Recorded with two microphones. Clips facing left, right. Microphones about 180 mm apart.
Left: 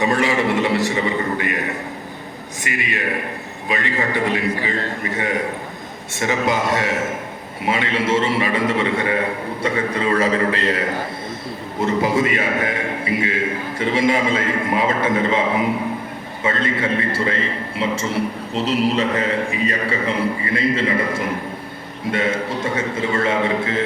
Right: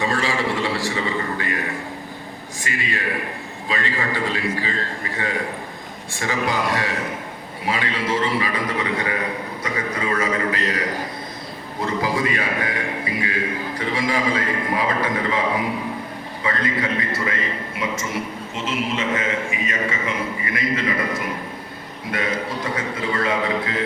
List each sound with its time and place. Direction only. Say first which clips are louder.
0.0 s a man's voice: left 4 dB; 20° left (ahead or behind)
2.6 s a man's voice: left 2 dB; 20° left (ahead or behind)